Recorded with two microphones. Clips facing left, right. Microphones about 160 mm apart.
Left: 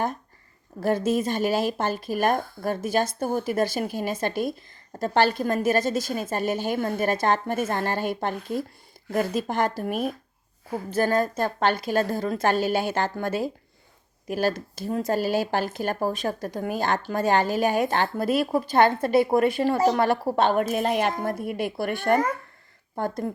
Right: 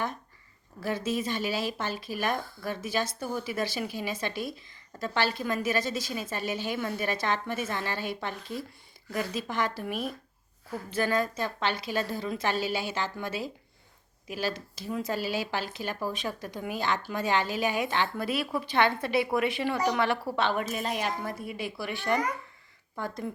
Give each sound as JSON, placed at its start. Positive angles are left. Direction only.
{"t": 0.8, "sound": "speech", "side_deg": 50}